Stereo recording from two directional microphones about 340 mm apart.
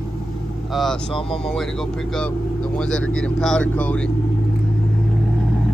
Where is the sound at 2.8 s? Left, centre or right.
Centre.